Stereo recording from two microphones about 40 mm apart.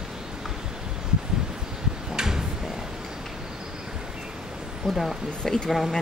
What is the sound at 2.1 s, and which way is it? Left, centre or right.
Tick-tock, centre.